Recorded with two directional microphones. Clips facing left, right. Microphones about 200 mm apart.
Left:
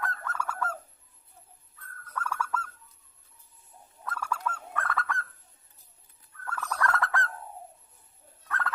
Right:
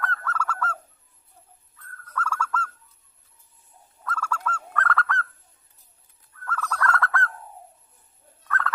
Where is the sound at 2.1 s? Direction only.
15° left (ahead or behind).